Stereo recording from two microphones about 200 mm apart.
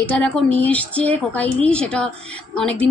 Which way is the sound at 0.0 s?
5° left (ahead or behind).